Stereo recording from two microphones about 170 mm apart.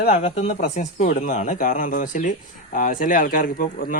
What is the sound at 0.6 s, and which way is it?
Speech, 55° left (ahead or behind).